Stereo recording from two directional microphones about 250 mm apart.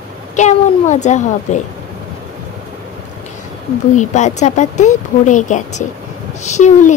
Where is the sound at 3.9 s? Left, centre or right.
Left.